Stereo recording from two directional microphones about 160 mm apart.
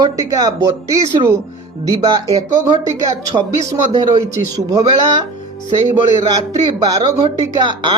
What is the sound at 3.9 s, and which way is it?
Speech, 25° right (ahead or behind).